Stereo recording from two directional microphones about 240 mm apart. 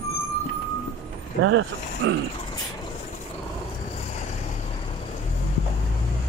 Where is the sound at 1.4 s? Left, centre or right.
Right.